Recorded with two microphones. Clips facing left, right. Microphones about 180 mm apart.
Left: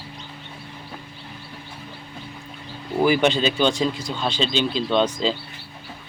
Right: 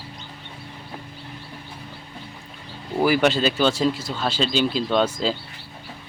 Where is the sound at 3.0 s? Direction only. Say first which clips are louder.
Even; 5° right (ahead or behind).